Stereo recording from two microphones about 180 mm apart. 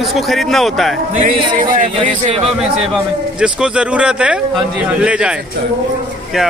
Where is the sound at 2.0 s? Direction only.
35° right (ahead or behind).